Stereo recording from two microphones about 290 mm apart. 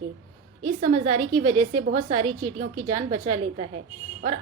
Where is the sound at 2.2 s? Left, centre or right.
Right.